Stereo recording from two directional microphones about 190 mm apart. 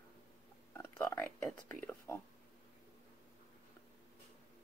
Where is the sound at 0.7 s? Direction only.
15° left (ahead or behind).